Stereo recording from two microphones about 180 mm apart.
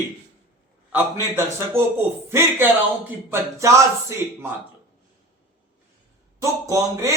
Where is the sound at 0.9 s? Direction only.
10° right (ahead or behind).